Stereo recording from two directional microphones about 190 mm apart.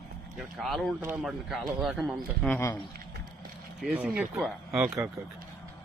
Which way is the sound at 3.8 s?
5° right (ahead or behind).